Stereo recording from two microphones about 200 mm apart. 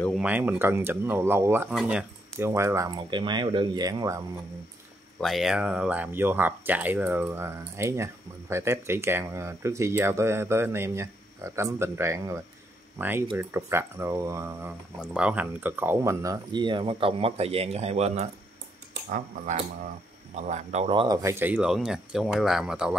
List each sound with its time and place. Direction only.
0.2 s speech: 5° right (ahead or behind)
5.2 s speech: centre (ahead or behind); by 21.2 s 25° right (ahead or behind)
21.2 s speech: 10° right (ahead or behind)